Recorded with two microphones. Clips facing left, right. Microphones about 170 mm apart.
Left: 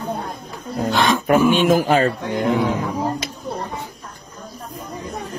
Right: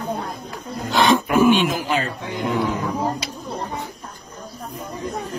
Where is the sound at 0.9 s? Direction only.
Centre (ahead or behind).